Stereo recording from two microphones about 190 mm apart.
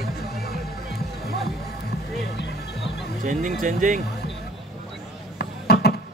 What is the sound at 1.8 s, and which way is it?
Music, 60° left (ahead or behind).